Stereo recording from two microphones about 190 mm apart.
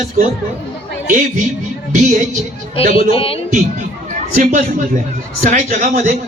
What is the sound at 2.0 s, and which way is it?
Speech, 40° right (ahead or behind).